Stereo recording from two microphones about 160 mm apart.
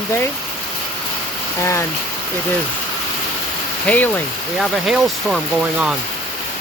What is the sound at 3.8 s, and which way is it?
Speech, 10° left (ahead or behind).